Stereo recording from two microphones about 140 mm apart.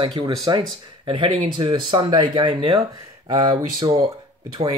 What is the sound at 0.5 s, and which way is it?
Speech, 30° right (ahead or behind).